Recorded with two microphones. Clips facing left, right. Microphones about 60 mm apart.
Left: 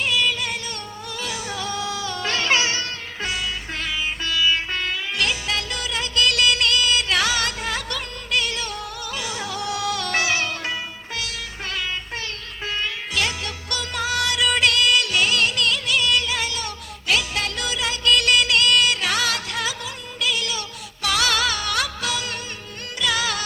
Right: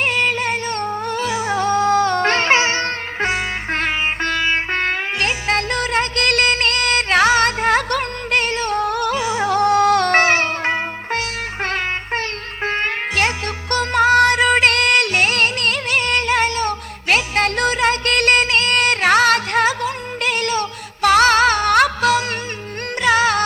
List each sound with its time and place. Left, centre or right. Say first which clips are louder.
0.0 s music: right 4 dB; right
1.3 s music: right 9 dB; right
1.5 s music: right 15 dB; right
9.1 s music: right 10 dB; right
9.5 s music: right 14 dB; right